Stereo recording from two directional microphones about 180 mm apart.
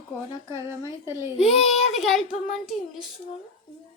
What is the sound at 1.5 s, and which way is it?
Speech, 35° left (ahead or behind).